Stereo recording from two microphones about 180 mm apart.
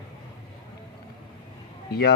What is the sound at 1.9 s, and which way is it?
Speech, 60° left (ahead or behind).